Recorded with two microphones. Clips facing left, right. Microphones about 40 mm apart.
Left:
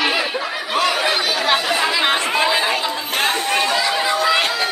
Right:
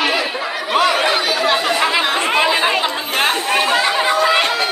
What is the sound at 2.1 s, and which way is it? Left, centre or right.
Chatter, right.